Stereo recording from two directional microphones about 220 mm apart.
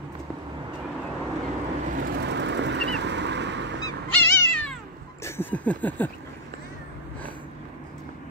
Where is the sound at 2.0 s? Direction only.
50° right (ahead or behind).